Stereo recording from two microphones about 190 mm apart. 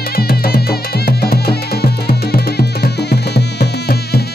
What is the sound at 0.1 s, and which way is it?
Music, 55° left (ahead or behind).